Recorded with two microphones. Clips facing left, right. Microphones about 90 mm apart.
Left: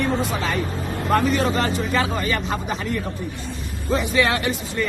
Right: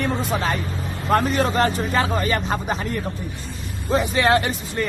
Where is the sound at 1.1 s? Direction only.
50° right (ahead or behind).